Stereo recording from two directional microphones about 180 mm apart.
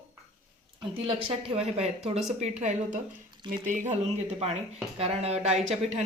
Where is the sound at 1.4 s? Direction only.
35° right (ahead or behind).